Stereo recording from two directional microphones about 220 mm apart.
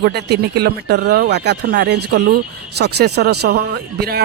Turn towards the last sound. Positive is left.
turn(degrees=-45)  # may be behind; listen again after turning